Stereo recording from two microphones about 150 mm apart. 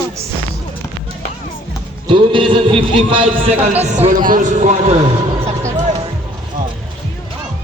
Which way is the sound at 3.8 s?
45° right (ahead or behind).